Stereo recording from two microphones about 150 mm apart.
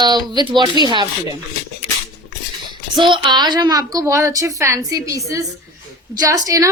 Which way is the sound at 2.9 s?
30° right (ahead or behind).